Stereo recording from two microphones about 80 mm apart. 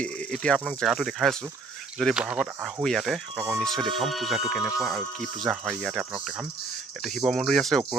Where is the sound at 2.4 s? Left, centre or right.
Centre.